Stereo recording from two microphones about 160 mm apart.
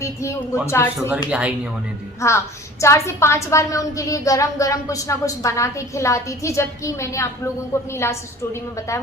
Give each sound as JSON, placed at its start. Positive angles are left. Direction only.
{"t": 0.0, "sound": "a woman's voice", "side_deg": 20}
{"t": 1.1, "sound": "speech", "side_deg": -10}
{"t": 2.2, "sound": "a woman's voice", "side_deg": 20}